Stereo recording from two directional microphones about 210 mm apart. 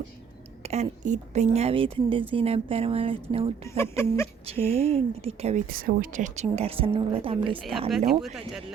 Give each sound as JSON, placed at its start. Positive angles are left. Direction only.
{"t": 0.6, "sound": "speech", "side_deg": -30}
{"t": 3.8, "sound": "speech", "side_deg": 10}
{"t": 4.4, "sound": "speech", "side_deg": -30}